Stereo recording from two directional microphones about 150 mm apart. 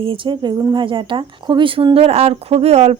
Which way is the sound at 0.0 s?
35° right (ahead or behind).